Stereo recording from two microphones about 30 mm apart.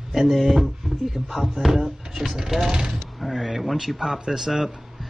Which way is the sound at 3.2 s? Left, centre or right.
Centre.